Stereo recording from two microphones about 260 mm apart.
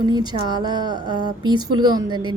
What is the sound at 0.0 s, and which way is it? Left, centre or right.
Speech, centre.